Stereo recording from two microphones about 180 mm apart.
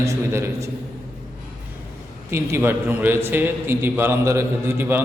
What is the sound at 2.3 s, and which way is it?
A man's voice, 15° right (ahead or behind).